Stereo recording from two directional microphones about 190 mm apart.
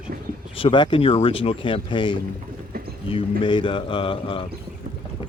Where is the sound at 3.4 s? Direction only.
25° left (ahead or behind).